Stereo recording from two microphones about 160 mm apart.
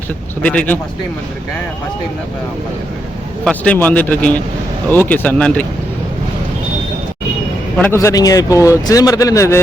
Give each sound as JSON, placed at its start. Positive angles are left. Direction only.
{"t": 0.4, "sound": "speech", "side_deg": 10}
{"t": 3.4, "sound": "speech", "side_deg": 10}
{"t": 7.8, "sound": "speech", "side_deg": 15}